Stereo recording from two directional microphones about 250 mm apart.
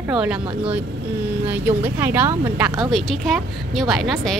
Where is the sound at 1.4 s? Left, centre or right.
Centre.